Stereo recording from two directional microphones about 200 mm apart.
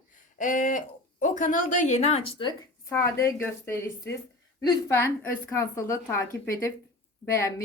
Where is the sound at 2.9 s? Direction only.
15° left (ahead or behind).